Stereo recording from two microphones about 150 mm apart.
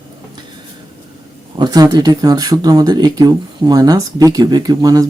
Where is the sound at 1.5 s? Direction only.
25° right (ahead or behind).